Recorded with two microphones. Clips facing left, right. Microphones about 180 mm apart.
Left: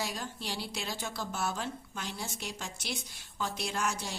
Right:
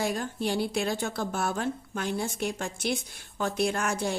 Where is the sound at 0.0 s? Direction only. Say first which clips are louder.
Right 9 dB; 55° right (ahead or behind).